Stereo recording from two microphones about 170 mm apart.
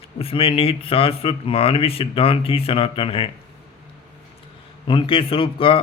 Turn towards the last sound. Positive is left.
turn(degrees=30)  # may be behind; listen again after turning